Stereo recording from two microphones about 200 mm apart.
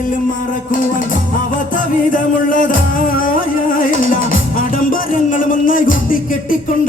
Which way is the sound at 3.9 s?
45° left (ahead or behind).